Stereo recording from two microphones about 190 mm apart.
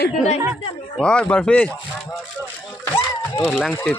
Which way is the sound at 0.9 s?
5° left (ahead or behind).